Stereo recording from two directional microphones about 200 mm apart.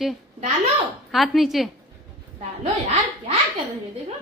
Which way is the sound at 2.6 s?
30° right (ahead or behind).